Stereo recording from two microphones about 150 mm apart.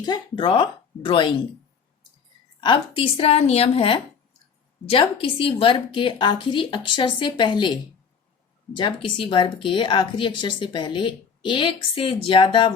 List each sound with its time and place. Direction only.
0.0 s a woman's voice: 30° left (ahead or behind)
2.6 s a woman's voice: 30° left (ahead or behind)